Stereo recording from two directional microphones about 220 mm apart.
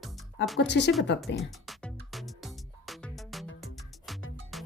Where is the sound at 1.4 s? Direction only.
Centre (ahead or behind).